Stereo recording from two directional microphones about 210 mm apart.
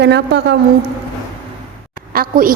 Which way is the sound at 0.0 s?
55° right (ahead or behind).